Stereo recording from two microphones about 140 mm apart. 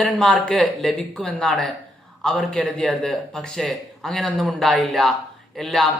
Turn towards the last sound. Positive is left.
turn(degrees=0)  # may be behind; listen again after turning